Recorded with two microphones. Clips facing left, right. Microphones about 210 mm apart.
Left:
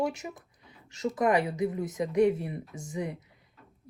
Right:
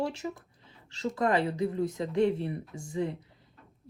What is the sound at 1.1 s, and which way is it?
Speech, 15° left (ahead or behind).